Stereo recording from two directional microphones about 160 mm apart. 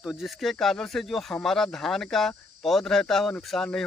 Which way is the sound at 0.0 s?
5° right (ahead or behind).